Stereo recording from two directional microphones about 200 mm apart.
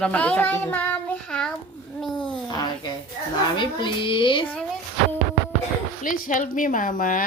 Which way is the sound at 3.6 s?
25° left (ahead or behind).